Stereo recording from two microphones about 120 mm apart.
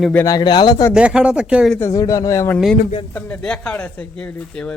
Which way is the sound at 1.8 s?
25° left (ahead or behind).